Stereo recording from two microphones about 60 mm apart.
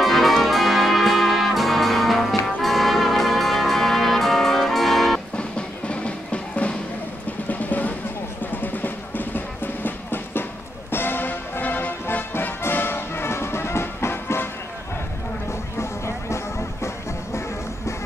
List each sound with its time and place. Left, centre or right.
0.0 s music: centre
5.4 s music: centre; by 14.5 s left
15.8 s music: left